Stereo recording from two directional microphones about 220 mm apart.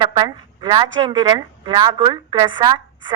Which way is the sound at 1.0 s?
20° right (ahead or behind).